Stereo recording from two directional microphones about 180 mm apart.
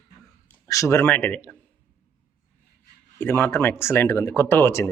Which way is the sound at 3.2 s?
10° left (ahead or behind).